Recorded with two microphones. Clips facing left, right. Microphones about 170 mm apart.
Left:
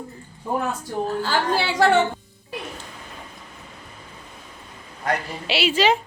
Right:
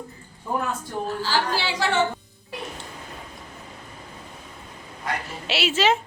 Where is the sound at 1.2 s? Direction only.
55° left (ahead or behind).